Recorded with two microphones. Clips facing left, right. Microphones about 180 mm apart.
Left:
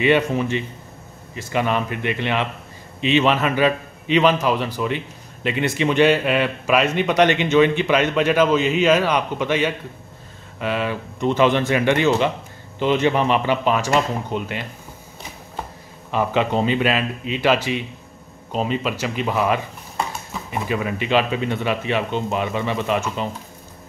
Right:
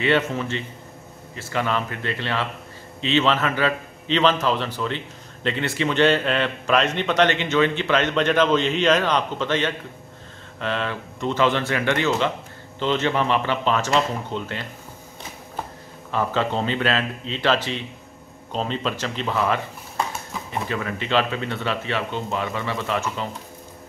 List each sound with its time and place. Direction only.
0.0 s a man's voice: 15° left (ahead or behind)
16.1 s a man's voice: 15° left (ahead or behind)
20.6 s a man's voice: 15° left (ahead or behind)